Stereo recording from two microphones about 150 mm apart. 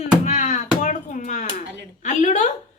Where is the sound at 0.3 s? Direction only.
55° left (ahead or behind).